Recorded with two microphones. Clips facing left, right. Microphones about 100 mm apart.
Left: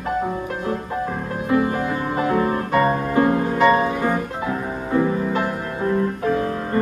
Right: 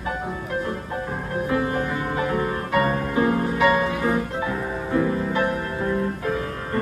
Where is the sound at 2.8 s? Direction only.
35° left (ahead or behind).